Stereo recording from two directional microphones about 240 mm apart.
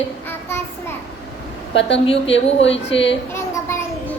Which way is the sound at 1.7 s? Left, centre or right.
Left.